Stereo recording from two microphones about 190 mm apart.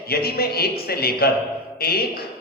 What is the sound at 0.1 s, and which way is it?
A man's voice, 55° left (ahead or behind).